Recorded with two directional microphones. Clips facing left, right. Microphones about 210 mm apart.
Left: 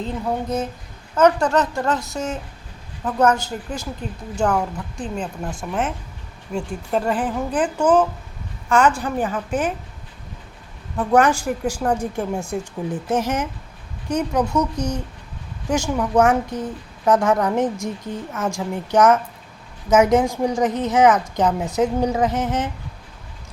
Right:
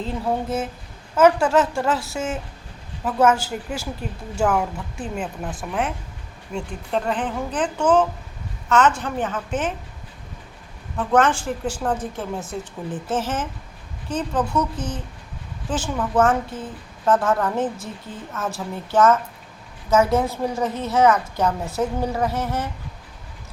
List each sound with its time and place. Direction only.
0.0 s a woman's voice: 5° right (ahead or behind)
10.9 s a woman's voice: 10° left (ahead or behind)